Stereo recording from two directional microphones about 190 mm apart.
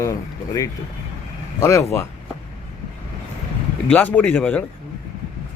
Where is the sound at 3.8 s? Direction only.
10° left (ahead or behind).